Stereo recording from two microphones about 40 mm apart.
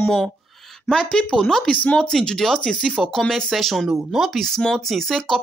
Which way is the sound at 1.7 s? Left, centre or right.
Left.